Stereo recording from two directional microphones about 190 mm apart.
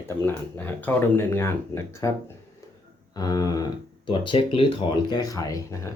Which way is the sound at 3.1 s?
20° left (ahead or behind).